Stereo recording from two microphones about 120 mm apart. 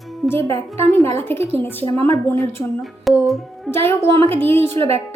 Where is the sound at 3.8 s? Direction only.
20° left (ahead or behind).